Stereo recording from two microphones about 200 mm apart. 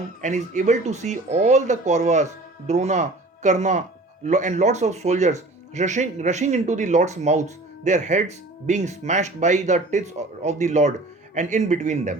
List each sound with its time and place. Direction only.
0.2 s speech: 40° right (ahead or behind)